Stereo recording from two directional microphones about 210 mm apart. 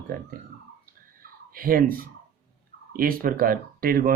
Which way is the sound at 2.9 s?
45° right (ahead or behind).